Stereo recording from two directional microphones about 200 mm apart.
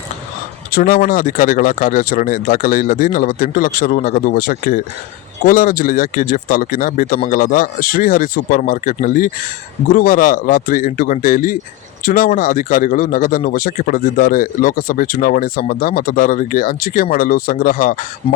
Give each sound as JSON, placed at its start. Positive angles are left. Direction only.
{"t": 0.7, "sound": "speech", "side_deg": 45}